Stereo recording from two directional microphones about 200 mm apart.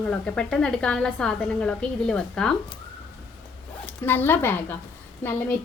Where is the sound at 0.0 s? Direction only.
5° left (ahead or behind).